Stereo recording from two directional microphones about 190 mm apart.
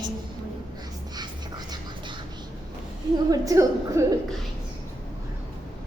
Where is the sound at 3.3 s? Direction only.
15° right (ahead or behind).